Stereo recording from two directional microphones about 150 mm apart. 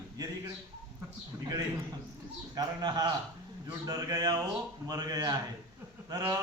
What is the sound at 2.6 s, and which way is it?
Speech, 25° right (ahead or behind).